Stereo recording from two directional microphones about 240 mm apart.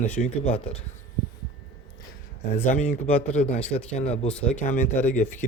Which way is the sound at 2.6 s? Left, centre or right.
Left.